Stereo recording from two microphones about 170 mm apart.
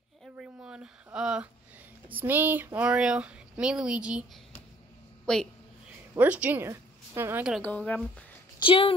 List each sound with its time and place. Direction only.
0.2 s a sound: 5° right (ahead or behind)
2.1 s a woman's voice: 10° right (ahead or behind)
6.1 s a woman's voice: 10° right (ahead or behind)
7.5 s speech: 5° left (ahead or behind)
8.5 s speech: 30° left (ahead or behind)